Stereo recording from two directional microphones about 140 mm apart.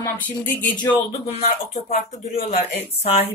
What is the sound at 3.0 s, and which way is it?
Speech, 45° left (ahead or behind).